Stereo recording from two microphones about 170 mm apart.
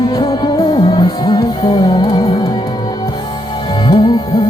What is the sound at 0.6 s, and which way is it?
Music, 35° left (ahead or behind).